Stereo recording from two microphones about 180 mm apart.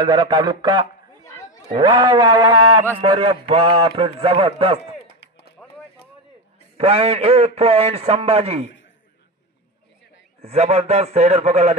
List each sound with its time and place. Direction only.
0.0 s sheep: 25° right (ahead or behind)
1.2 s chatter: 15° left (ahead or behind)
1.7 s sheep: 25° right (ahead or behind)
3.0 s a man's voice: 30° right (ahead or behind)
5.6 s a sound: centre (ahead or behind)
6.8 s a man's voice: 30° right (ahead or behind)
10.4 s a man's voice: 35° right (ahead or behind)